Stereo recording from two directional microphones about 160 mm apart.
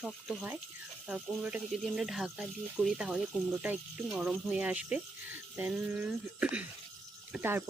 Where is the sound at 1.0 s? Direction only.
5° right (ahead or behind).